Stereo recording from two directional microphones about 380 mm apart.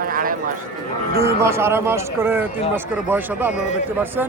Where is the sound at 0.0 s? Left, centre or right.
Right.